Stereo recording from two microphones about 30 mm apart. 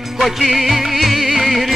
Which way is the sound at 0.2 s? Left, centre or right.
Centre.